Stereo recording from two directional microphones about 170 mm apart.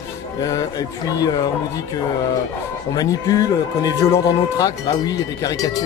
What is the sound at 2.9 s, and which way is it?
Speech, 20° left (ahead or behind).